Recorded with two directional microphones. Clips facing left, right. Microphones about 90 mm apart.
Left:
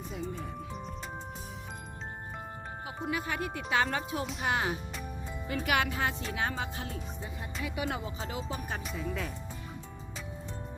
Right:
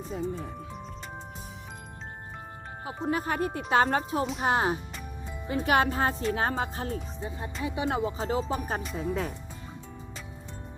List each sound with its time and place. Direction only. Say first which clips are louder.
0.0 s music: right 5 dB; 35° right (ahead or behind)
2.8 s speech: right 6 dB; 35° right (ahead or behind)